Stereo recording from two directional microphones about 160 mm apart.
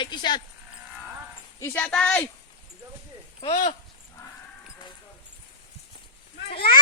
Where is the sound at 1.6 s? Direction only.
15° left (ahead or behind).